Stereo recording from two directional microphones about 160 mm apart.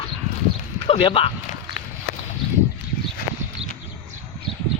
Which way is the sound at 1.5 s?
60° left (ahead or behind).